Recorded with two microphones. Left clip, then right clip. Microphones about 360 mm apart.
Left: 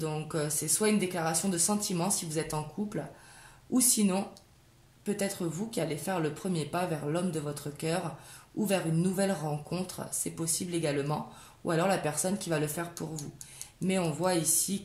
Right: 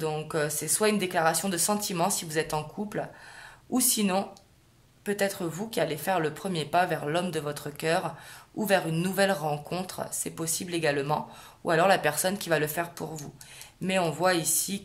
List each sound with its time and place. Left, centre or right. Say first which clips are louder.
0.0 s speech: right 5 dB; right